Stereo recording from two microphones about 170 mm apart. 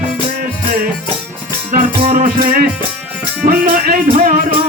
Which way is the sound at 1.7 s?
50° right (ahead or behind).